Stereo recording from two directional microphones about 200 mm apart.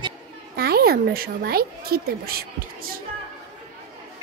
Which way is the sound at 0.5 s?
50° right (ahead or behind).